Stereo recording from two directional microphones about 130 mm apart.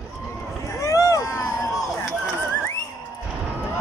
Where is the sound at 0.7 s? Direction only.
25° left (ahead or behind).